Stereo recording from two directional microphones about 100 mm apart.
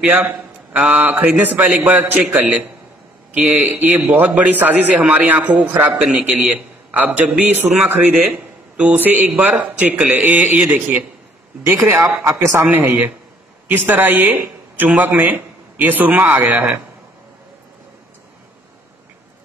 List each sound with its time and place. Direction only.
0.0 s a man's voice: 15° right (ahead or behind)
3.6 s a man's voice: 15° right (ahead or behind)